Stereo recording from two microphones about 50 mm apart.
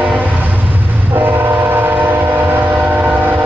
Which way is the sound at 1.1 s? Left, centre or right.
Right.